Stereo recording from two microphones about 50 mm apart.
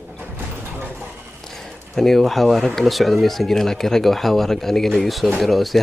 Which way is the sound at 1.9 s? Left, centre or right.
Centre.